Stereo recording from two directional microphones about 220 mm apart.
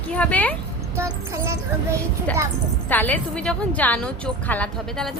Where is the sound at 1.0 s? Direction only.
15° right (ahead or behind).